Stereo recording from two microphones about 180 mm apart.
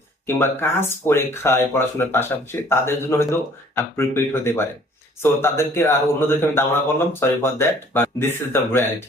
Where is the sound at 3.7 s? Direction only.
15° left (ahead or behind).